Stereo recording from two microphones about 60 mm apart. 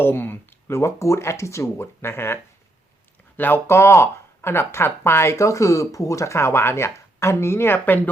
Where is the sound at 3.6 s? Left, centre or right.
Left.